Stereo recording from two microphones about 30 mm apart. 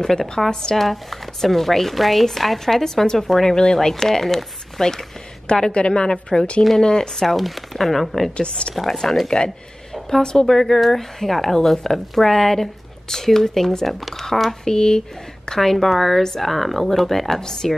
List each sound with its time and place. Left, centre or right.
0.5 s speech: left
0.7 s speech: centre
3.5 s speech: left
5.7 s a woman's voice: left
6.8 s speech: left
7.2 s speech: centre
8.4 s a woman's voice: left
8.7 s speech: centre
10.0 s speech: centre
13.8 s speech: centre
14.6 s speech: left
15.7 s speech: centre
17.4 s speech: centre